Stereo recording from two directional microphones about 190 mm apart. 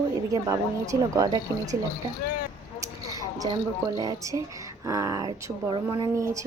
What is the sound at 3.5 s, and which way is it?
Speech, 20° right (ahead or behind).